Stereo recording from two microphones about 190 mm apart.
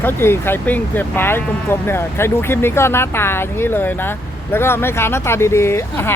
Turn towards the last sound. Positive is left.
turn(degrees=10)  # may be behind; listen again after turning